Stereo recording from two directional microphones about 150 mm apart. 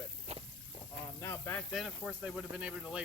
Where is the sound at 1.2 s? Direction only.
15° left (ahead or behind).